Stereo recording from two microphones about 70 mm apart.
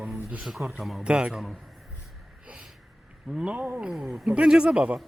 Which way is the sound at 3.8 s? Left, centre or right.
Centre.